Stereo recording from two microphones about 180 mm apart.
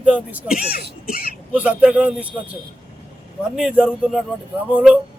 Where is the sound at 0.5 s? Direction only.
55° left (ahead or behind).